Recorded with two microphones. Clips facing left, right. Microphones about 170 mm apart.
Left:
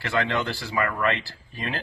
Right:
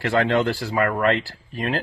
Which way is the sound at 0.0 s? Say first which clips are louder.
Right 6 dB; 50° right (ahead or behind).